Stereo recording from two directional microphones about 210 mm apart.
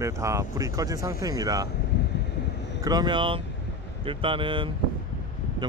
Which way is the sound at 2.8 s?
20° right (ahead or behind).